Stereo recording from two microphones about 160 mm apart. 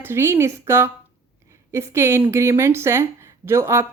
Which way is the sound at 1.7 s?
15° right (ahead or behind).